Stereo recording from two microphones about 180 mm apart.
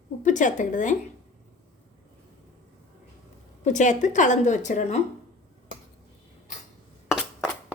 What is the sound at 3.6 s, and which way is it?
A woman's voice, 40° left (ahead or behind).